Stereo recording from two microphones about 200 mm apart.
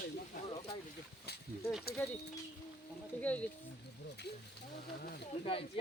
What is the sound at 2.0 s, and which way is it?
Speech, 10° left (ahead or behind).